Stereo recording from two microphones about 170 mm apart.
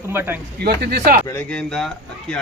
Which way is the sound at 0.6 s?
75° right (ahead or behind).